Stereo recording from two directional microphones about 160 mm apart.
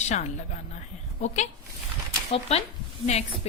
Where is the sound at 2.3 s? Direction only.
40° left (ahead or behind).